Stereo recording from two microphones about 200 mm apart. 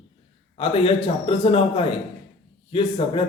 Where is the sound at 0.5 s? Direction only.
30° left (ahead or behind).